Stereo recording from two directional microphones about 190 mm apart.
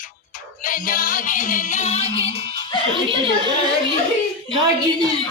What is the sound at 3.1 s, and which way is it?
Speech, 25° right (ahead or behind).